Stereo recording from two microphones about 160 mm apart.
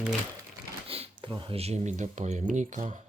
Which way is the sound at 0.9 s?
35° right (ahead or behind).